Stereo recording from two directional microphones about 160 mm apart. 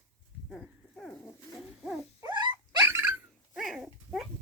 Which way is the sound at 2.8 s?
15° right (ahead or behind).